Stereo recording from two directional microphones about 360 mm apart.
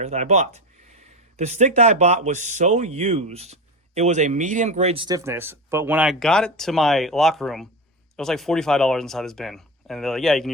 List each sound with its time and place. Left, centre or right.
0.0 s speech: centre